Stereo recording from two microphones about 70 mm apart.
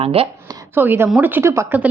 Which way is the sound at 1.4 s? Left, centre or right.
Right.